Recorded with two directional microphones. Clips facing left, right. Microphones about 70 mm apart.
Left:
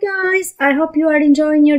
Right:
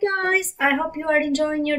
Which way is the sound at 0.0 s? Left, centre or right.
Left.